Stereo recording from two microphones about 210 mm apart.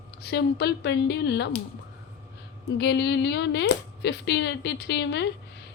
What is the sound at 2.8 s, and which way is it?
Speech, 55° left (ahead or behind).